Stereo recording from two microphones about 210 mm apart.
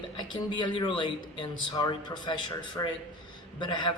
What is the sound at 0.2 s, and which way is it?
A man's voice, 20° left (ahead or behind).